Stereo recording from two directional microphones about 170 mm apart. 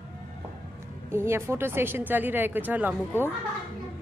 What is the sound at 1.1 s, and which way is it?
A woman's voice, 15° right (ahead or behind).